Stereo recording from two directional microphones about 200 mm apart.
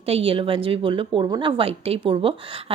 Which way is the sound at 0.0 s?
30° right (ahead or behind).